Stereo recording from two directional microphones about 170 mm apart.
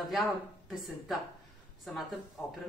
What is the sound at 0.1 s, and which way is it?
Speech, centre (ahead or behind).